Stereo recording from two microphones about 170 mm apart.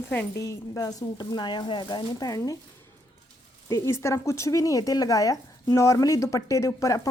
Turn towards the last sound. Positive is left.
turn(degrees=15)  # may be behind; listen again after turning